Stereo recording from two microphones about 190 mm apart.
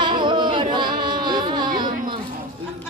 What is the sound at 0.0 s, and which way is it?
Music, 25° right (ahead or behind).